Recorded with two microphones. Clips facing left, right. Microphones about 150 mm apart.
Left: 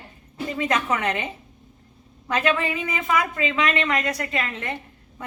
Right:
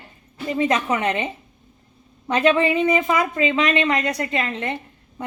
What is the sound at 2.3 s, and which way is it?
Speech, 30° right (ahead or behind).